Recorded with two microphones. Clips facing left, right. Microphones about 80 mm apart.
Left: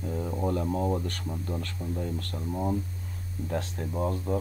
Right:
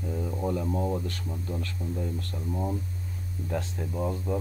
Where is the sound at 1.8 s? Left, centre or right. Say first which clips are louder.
Even; centre.